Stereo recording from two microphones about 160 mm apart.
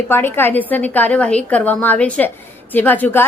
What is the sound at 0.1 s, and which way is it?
A woman's voice, 15° left (ahead or behind).